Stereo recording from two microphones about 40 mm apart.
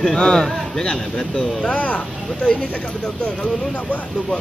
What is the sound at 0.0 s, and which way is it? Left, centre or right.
Speech, centre.